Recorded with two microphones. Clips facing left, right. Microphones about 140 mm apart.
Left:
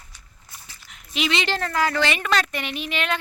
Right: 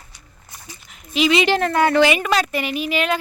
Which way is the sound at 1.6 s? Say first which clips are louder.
Right 6 dB; 55° right (ahead or behind).